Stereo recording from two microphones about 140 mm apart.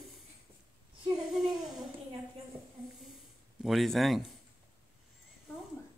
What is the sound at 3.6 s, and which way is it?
Speech, centre (ahead or behind).